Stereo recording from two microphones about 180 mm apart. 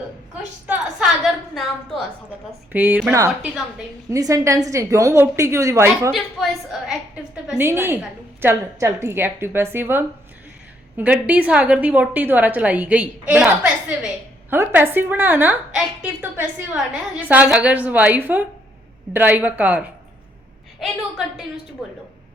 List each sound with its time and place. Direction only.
0.7 s a woman's voice: 5° right (ahead or behind)
6.1 s a woman's voice: centre (ahead or behind)